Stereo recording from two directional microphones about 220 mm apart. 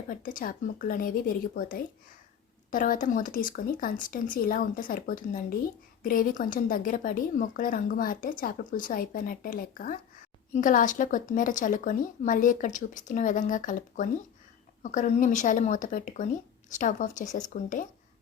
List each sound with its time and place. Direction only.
0.1 s a woman's voice: 40° left (ahead or behind)